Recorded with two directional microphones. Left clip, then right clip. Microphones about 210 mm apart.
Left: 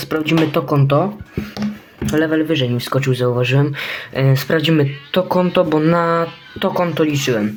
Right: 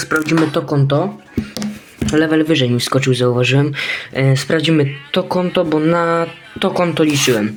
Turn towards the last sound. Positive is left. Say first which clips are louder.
# right 3 dB
turn(degrees=-10)  # may be behind; listen again after turning